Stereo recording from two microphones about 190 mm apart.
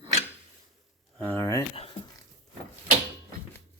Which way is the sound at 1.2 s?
10° left (ahead or behind).